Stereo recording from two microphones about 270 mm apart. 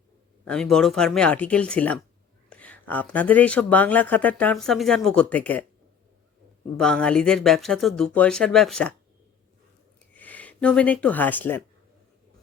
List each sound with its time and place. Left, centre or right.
0.4 s speech: centre
6.7 s speech: centre
10.2 s speech: centre